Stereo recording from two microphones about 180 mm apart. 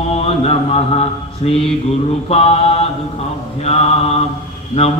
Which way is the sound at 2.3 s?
35° left (ahead or behind).